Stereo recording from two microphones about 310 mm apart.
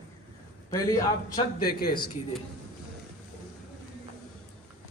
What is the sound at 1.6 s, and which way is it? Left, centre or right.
Speech, left.